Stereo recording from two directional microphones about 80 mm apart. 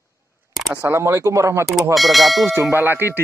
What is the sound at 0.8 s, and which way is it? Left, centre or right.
Speech, right.